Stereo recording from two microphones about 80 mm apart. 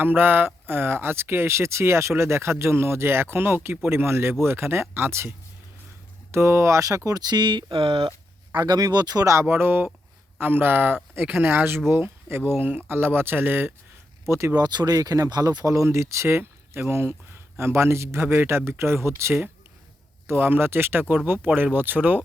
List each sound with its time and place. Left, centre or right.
0.0 s speech: right
6.3 s speech: right
8.5 s speech: right
14.3 s speech: right
14.5 s speech: right
14.9 s speech: right